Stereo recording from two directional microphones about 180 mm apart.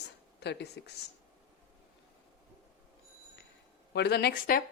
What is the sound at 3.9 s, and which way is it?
Speech, 65° left (ahead or behind).